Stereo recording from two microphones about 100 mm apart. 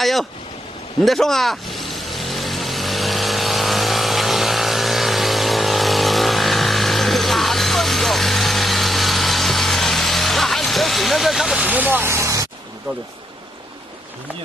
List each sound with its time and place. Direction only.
0.0 s speech: centre (ahead or behind)
1.0 s vehicle: centre (ahead or behind)
11.6 s speech: 15° right (ahead or behind)